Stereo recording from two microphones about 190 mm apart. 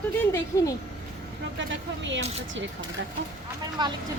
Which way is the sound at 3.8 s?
25° right (ahead or behind).